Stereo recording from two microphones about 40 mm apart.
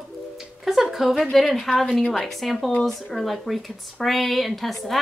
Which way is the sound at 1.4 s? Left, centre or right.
Centre.